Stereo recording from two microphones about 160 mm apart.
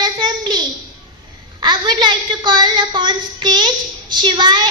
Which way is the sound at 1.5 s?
25° right (ahead or behind).